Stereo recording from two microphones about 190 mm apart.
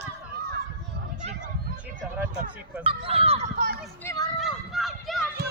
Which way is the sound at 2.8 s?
30° right (ahead or behind).